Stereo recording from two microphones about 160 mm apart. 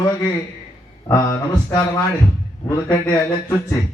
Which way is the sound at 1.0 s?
20° left (ahead or behind).